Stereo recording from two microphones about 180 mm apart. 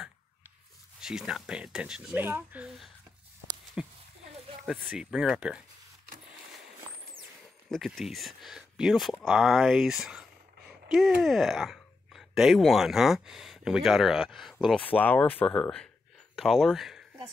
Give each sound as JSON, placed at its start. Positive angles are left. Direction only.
{"t": 1.0, "sound": "speech", "side_deg": -5}
{"t": 7.7, "sound": "speech", "side_deg": 0}